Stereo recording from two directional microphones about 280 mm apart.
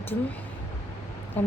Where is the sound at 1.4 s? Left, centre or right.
Centre.